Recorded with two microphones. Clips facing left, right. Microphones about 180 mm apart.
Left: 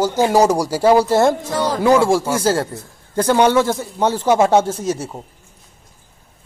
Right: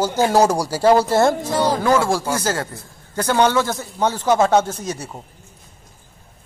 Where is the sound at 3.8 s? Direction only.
30° left (ahead or behind).